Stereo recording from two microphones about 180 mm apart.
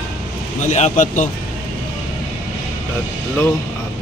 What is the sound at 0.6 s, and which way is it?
Speech, 40° left (ahead or behind).